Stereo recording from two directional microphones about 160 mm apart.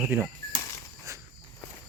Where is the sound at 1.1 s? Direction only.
20° right (ahead or behind).